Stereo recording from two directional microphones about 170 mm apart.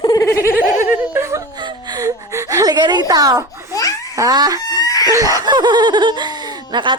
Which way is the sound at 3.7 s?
20° left (ahead or behind).